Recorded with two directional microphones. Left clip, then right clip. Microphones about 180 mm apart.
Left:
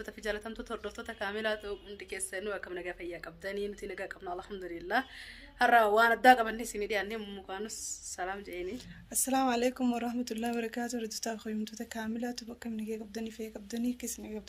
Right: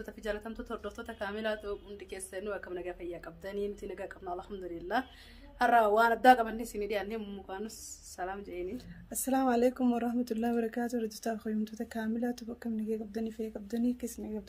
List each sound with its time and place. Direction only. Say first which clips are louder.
0.2 s speech: left 1 dB; centre (ahead or behind)
8.7 s speech: left 3 dB; 30° right (ahead or behind)